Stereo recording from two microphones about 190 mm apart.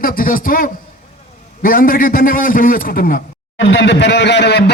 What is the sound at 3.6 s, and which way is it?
A man's voice, 70° left (ahead or behind).